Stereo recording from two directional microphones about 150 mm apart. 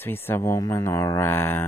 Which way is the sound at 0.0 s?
15° left (ahead or behind).